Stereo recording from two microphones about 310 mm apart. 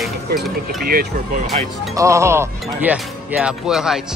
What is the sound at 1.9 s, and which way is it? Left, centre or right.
Speech, centre.